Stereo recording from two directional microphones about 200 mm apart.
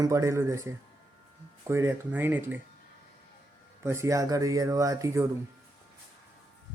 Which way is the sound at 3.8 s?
15° right (ahead or behind).